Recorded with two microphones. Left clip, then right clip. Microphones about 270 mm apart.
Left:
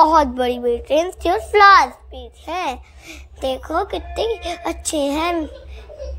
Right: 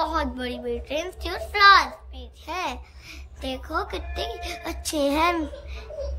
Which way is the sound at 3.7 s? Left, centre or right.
Centre.